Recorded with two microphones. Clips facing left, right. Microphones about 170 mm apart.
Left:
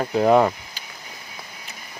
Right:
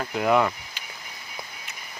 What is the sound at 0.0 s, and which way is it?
Speech, 35° left (ahead or behind).